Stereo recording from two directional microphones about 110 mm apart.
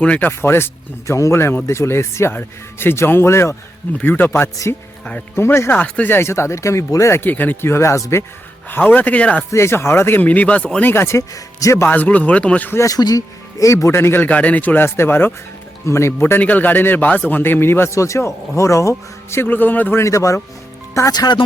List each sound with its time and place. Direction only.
0.0 s a man's voice: 15° left (ahead or behind)
9.5 s a man's voice: 25° left (ahead or behind)
11.9 s speech: 15° left (ahead or behind)
12.8 s a man's voice: 35° left (ahead or behind)